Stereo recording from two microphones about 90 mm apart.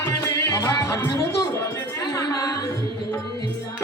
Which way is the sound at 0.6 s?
35° left (ahead or behind).